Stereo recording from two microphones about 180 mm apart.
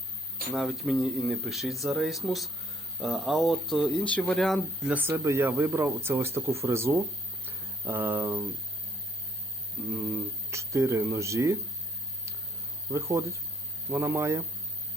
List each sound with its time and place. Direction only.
0.5 s speech: centre (ahead or behind)
7.4 s a sound: 10° right (ahead or behind)
10.5 s speech: 15° right (ahead or behind)
12.9 s speech: 15° right (ahead or behind)